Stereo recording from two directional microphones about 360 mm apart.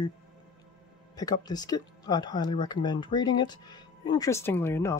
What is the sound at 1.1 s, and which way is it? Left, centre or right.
Speech, centre.